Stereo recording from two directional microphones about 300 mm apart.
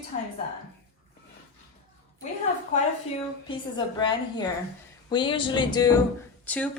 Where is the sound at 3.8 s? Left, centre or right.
Centre.